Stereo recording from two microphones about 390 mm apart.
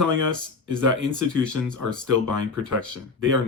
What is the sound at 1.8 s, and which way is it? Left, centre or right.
Speech, right.